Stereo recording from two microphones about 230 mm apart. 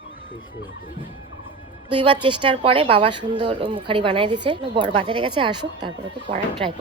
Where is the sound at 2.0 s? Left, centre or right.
Right.